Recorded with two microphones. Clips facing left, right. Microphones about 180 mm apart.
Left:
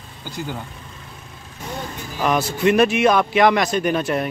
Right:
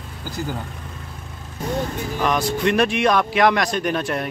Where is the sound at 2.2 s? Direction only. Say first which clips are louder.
Left 1 dB; 5° left (ahead or behind).